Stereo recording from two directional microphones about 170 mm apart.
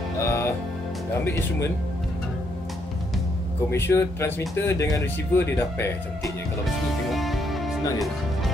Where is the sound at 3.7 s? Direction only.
15° left (ahead or behind).